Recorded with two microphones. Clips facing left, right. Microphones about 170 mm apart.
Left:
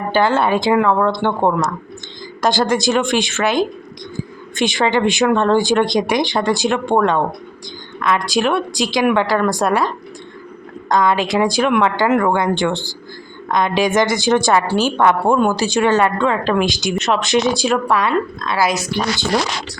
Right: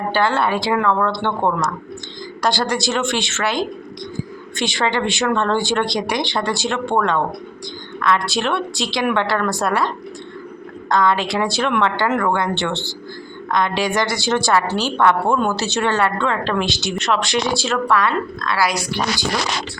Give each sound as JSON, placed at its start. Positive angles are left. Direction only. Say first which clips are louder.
{"t": 0.1, "sound": "speech", "louder": "left 4 dB", "side_deg": 20}
{"t": 10.8, "sound": "a woman's voice", "louder": "left 2 dB", "side_deg": 15}